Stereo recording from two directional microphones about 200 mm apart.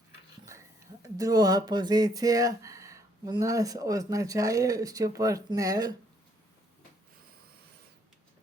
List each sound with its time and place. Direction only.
1.0 s speech: 15° right (ahead or behind)